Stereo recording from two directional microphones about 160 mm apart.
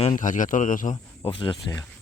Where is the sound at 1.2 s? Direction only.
30° left (ahead or behind).